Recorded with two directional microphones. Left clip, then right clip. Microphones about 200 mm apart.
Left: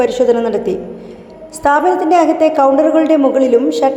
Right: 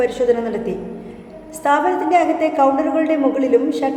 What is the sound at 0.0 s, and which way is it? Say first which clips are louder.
A woman's voice: left 5 dB; 30° left (ahead or behind).